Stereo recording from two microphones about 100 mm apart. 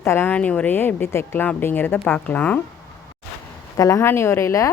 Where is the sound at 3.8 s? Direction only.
30° left (ahead or behind).